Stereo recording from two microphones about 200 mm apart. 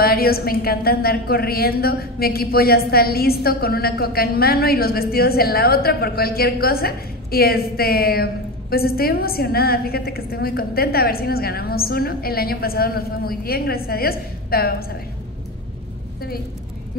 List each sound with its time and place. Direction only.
0.0 s a woman's voice: 50° left (ahead or behind)